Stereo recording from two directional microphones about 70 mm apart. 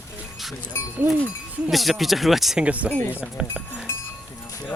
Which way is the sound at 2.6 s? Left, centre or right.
Centre.